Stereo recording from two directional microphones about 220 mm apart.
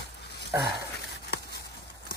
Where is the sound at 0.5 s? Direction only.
10° right (ahead or behind).